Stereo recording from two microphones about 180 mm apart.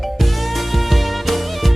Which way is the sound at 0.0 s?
Centre (ahead or behind).